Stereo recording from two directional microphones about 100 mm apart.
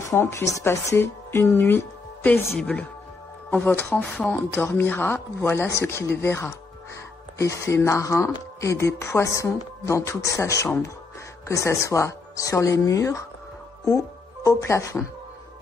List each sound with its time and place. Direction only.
0.0 s speech: 30° left (ahead or behind)